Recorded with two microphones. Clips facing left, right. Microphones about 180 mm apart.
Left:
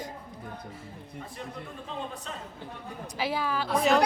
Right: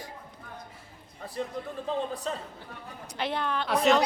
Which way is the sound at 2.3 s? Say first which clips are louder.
Right 7 dB; 35° right (ahead or behind).